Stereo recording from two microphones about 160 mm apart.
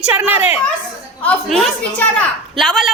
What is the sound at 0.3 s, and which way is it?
Speech, 40° left (ahead or behind).